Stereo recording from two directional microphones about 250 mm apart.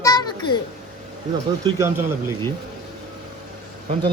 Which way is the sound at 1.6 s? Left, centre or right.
Centre.